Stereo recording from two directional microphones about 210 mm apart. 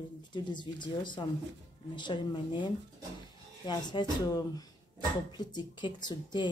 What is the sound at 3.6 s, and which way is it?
Speech, 20° left (ahead or behind).